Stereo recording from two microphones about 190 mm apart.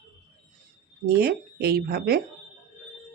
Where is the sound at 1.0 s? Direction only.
55° right (ahead or behind).